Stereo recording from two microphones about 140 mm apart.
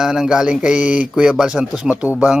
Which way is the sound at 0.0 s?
5° right (ahead or behind).